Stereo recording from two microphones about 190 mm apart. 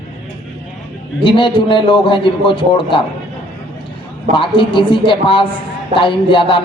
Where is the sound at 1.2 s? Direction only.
25° left (ahead or behind).